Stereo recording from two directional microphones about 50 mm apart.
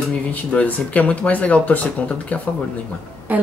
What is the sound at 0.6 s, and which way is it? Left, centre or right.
Speech, left.